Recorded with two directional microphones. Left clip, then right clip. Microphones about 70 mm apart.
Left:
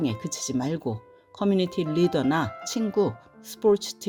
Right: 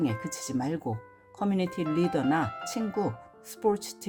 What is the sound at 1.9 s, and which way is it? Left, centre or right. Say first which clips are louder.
Speech: left 3 dB; left.